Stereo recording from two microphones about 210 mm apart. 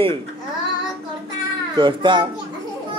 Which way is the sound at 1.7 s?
20° right (ahead or behind).